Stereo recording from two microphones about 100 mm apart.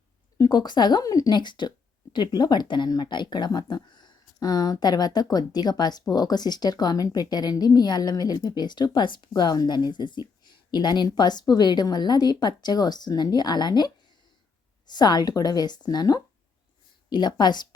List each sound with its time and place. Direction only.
0.3 s speech: 40° left (ahead or behind)